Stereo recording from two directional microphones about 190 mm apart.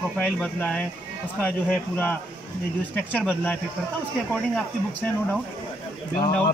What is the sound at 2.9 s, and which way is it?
Speech, 10° left (ahead or behind).